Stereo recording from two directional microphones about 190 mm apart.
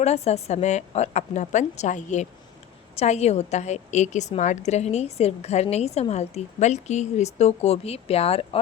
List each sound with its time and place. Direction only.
0.0 s a woman's voice: 35° left (ahead or behind)